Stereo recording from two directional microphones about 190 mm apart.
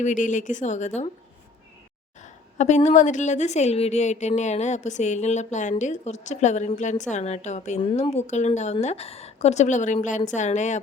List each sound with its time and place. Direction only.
0.0 s a woman's voice: 40° left (ahead or behind)
2.2 s a woman's voice: 40° left (ahead or behind)
7.8 s a woman's voice: 25° left (ahead or behind)